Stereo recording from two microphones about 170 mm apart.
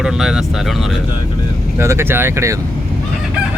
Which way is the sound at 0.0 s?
5° right (ahead or behind).